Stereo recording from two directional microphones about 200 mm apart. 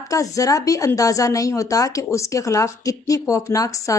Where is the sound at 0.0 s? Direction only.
15° left (ahead or behind).